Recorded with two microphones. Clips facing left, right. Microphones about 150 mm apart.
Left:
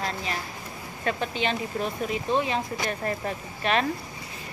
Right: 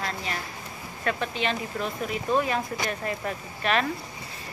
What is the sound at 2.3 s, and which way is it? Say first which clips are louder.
Speech: right 1 dB; 25° left (ahead or behind).